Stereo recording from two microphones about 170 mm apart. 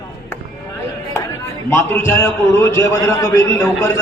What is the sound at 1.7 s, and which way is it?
A man's voice, 15° left (ahead or behind).